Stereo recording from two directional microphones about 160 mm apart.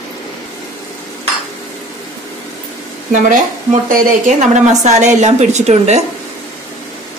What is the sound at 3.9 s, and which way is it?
A woman's voice, 45° right (ahead or behind).